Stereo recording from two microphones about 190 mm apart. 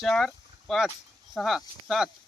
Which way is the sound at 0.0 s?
Centre (ahead or behind).